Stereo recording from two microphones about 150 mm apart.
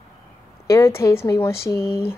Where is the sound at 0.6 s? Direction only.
20° left (ahead or behind).